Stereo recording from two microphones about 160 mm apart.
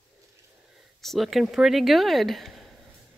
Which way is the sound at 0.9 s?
Centre (ahead or behind).